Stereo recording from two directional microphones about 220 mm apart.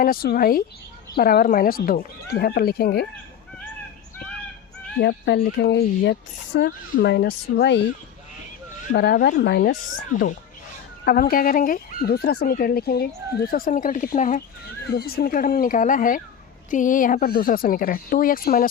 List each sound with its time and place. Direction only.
0.0 s speech: 40° left (ahead or behind)
4.9 s speech: 50° left (ahead or behind)
8.9 s speech: 50° left (ahead or behind)
11.0 s speech: 40° left (ahead or behind)